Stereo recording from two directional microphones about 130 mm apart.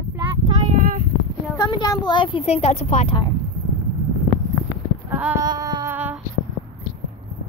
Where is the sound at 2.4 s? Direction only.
55° left (ahead or behind).